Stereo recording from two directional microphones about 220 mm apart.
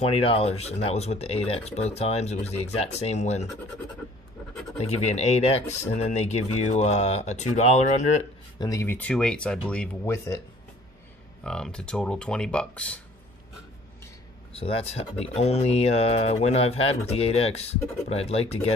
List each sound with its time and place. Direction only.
0.0 s speech: 25° left (ahead or behind)
4.7 s speech: 30° left (ahead or behind)
8.5 s speech: 15° left (ahead or behind)
11.4 s speech: 5° left (ahead or behind)
14.5 s speech: 25° left (ahead or behind)